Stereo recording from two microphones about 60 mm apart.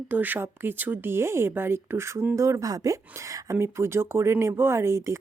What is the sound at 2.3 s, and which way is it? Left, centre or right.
Speech, right.